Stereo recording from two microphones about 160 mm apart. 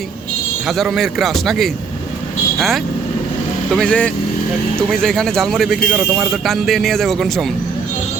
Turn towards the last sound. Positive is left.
turn(degrees=0)  # may be behind; listen again after turning